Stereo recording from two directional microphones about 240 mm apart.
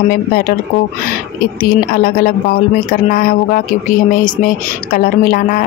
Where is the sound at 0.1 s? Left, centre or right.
Left.